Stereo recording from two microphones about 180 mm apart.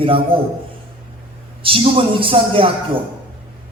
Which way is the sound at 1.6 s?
30° right (ahead or behind).